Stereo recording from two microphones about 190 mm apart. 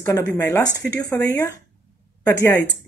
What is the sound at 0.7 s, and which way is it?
Speech, 65° left (ahead or behind).